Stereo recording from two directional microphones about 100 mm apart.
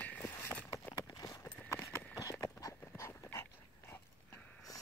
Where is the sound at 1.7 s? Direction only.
30° left (ahead or behind).